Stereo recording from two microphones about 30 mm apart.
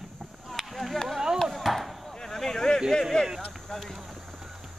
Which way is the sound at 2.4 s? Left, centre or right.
Centre.